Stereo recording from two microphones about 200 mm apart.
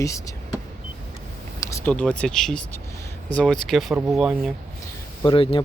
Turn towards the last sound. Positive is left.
turn(degrees=25)  # may be behind; listen again after turning